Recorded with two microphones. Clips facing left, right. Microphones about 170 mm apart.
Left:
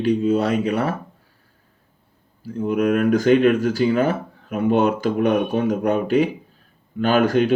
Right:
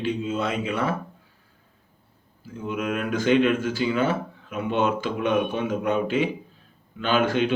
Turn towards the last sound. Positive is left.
turn(degrees=40)  # may be behind; listen again after turning